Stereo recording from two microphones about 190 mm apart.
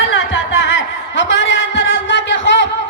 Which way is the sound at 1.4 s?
75° left (ahead or behind).